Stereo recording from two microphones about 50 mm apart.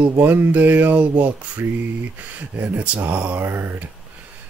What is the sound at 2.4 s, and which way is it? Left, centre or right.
Speech, right.